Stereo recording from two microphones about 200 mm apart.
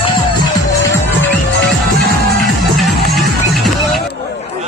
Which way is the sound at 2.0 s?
Centre (ahead or behind).